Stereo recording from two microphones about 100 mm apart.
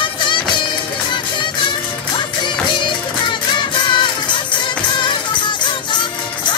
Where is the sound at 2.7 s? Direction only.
55° left (ahead or behind).